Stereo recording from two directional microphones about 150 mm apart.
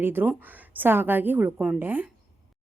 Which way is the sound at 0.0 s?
15° right (ahead or behind).